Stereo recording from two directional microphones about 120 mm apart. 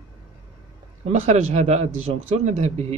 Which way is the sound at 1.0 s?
70° right (ahead or behind).